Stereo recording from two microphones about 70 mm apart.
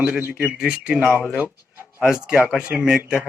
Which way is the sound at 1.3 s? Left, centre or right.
Right.